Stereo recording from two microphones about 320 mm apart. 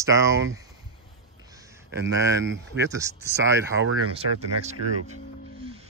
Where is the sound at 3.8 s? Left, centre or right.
Right.